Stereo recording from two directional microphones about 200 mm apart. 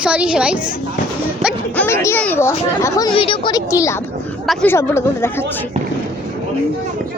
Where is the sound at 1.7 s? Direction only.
10° left (ahead or behind).